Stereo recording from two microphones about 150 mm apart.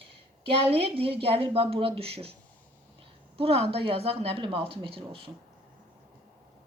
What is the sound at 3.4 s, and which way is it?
A woman's voice, 40° right (ahead or behind).